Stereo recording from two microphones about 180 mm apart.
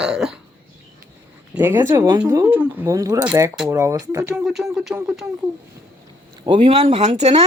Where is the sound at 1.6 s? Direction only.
10° right (ahead or behind).